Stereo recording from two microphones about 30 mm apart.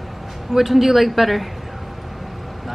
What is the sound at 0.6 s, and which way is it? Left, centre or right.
Speech, centre.